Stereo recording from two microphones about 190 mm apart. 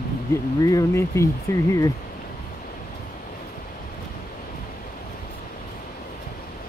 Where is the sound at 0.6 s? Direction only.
20° left (ahead or behind).